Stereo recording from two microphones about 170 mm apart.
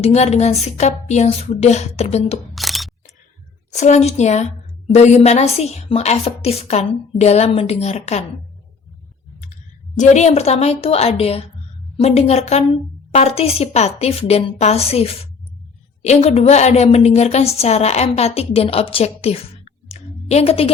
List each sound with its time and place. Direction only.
0.0 s a woman's voice: 40° left (ahead or behind)
2.6 s single-lens reflex camera: centre (ahead or behind)
3.7 s a woman's voice: 45° left (ahead or behind)
10.0 s a woman's voice: 40° left (ahead or behind)